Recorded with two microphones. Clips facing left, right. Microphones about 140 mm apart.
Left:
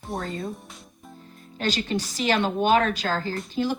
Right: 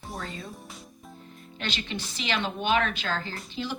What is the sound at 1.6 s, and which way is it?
A woman's voice, 40° left (ahead or behind).